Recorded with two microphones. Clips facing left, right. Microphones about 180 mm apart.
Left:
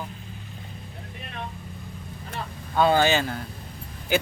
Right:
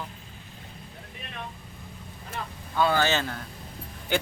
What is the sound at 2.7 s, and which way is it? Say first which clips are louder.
Speech: left 4 dB; 20° left (ahead or behind).